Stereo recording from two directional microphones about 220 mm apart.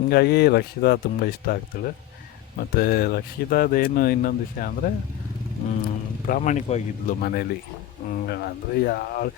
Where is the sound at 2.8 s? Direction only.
45° left (ahead or behind).